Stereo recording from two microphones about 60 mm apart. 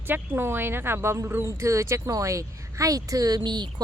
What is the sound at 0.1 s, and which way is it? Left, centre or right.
Speech, right.